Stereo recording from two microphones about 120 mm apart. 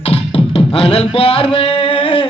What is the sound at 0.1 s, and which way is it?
Beatboxing, 50° left (ahead or behind).